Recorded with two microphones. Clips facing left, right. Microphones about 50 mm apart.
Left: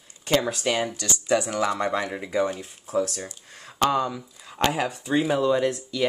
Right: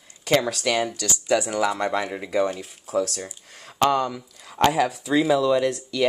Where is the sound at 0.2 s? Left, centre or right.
Right.